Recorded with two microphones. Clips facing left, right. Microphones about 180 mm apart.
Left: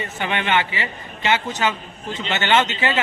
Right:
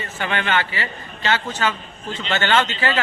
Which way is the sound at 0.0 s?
20° left (ahead or behind).